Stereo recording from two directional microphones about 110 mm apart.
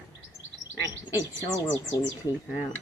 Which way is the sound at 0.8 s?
25° right (ahead or behind).